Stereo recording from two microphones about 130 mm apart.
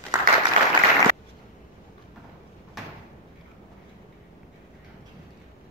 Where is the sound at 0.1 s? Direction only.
30° right (ahead or behind).